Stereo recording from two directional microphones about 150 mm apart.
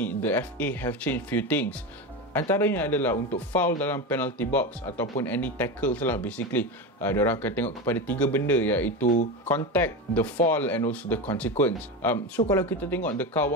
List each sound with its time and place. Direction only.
0.0 s speech: 10° left (ahead or behind)
9.0 s speech: 55° left (ahead or behind)
9.5 s speech: 10° left (ahead or behind)